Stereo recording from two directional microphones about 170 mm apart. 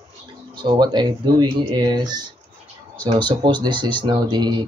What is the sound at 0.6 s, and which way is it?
Speech, 25° right (ahead or behind).